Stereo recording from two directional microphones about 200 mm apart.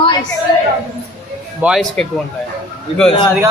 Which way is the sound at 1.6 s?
Centre (ahead or behind).